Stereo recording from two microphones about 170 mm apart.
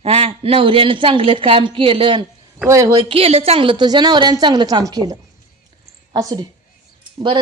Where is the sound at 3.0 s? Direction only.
35° right (ahead or behind).